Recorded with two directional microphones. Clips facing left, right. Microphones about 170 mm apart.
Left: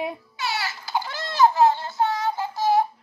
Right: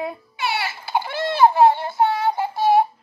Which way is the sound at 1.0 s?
30° right (ahead or behind).